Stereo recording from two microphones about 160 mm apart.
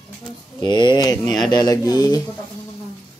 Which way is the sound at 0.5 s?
25° left (ahead or behind).